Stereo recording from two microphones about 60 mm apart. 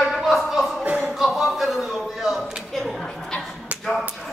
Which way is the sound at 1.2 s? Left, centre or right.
Centre.